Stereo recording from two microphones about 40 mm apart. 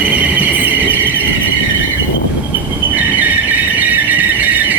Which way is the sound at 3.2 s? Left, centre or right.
Right.